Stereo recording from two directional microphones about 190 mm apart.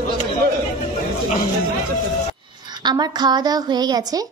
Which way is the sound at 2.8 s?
20° right (ahead or behind).